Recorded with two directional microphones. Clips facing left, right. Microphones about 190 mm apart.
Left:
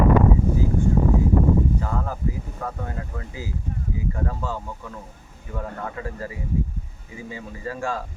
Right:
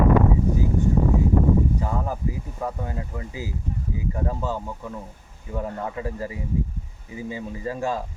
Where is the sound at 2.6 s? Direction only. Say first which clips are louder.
Right 3 dB; 15° right (ahead or behind).